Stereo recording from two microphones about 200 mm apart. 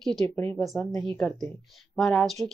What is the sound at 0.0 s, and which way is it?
Speech, 5° left (ahead or behind).